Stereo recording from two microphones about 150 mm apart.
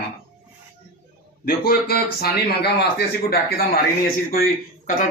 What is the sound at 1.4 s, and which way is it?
A man's voice, 85° left.